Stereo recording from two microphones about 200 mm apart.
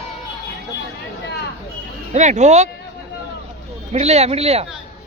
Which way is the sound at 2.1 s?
35° right (ahead or behind).